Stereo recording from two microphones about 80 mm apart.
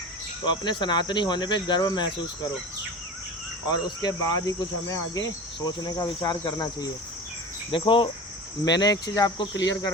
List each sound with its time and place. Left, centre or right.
0.4 s speech: left
3.7 s cricket: left
5.5 s insect: left
7.7 s cricket: left
8.6 s insect: left